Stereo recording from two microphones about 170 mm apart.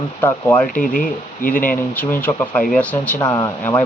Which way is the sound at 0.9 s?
50° left (ahead or behind).